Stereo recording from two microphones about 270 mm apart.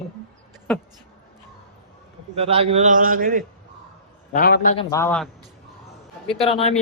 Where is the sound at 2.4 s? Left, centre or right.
Right.